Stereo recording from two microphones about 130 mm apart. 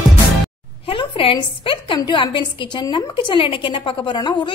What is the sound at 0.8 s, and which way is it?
A woman's voice, 45° left (ahead or behind).